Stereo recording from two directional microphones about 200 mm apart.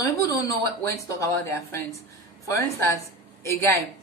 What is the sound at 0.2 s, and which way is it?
A woman's voice, 15° left (ahead or behind).